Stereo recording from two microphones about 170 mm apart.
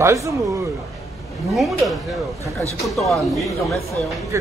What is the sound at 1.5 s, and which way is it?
A man's voice, centre (ahead or behind).